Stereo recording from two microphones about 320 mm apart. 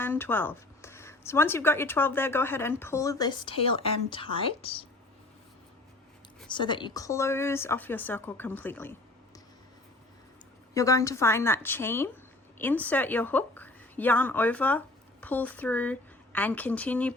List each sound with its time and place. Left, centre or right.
0.0 s speech: centre
6.5 s speech: centre
10.8 s a woman's voice: centre